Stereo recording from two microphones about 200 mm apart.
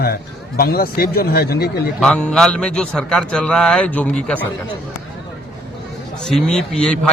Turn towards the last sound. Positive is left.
turn(degrees=5)  # may be behind; listen again after turning